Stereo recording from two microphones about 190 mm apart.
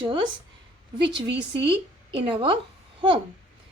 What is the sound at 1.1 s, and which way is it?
Speech, 65° right (ahead or behind).